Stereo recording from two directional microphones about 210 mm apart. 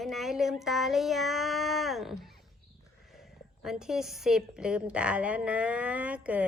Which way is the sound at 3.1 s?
Centre (ahead or behind).